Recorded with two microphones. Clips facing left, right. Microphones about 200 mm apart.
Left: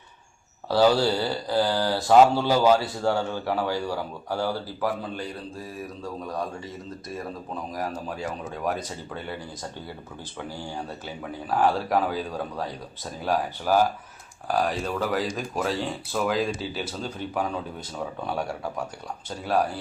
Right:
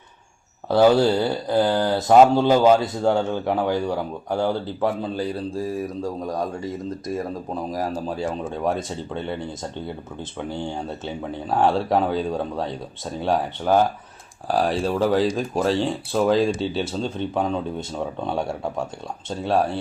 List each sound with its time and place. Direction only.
0.7 s speech: 20° right (ahead or behind)
6.0 s speech: 40° right (ahead or behind)
7.7 s speech: 30° right (ahead or behind)